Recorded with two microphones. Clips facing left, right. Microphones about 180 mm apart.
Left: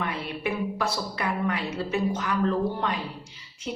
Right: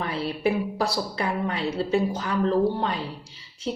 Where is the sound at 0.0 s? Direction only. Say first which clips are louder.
Right 5 dB; 30° right (ahead or behind).